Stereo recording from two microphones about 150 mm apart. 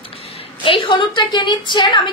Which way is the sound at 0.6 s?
35° left (ahead or behind).